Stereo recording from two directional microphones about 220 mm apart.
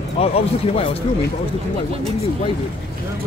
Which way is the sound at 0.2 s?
25° left (ahead or behind).